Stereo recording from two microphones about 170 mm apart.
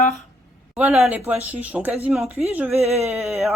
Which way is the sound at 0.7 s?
10° right (ahead or behind).